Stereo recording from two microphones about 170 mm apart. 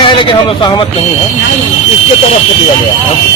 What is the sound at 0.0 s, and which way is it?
Speech, 30° left (ahead or behind).